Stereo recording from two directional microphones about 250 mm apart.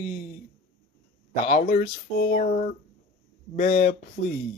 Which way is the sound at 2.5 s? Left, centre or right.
Left.